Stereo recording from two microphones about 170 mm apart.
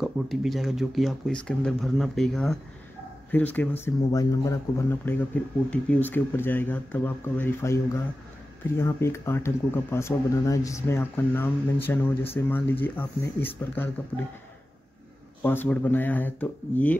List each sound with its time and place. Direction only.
0.0 s speech: centre (ahead or behind)
15.4 s speech: 10° left (ahead or behind)